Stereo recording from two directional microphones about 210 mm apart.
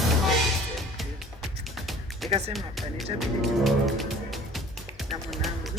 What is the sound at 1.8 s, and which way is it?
Music, centre (ahead or behind).